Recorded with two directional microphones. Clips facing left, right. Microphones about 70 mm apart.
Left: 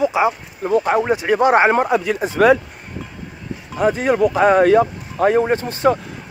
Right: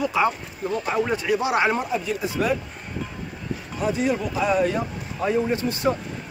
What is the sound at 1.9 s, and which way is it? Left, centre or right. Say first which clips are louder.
Speech: left 8 dB; left.